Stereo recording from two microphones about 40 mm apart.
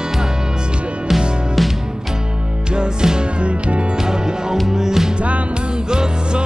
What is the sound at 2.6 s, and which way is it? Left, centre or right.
Music, right.